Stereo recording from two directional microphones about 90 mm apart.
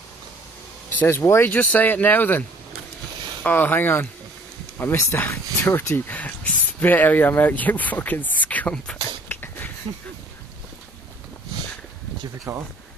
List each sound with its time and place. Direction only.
0.9 s speech: 30° left (ahead or behind)
1.5 s speech: 20° left (ahead or behind)
3.4 s speech: 20° left (ahead or behind)
9.3 s a sound: 20° left (ahead or behind)
12.5 s speech: 35° right (ahead or behind)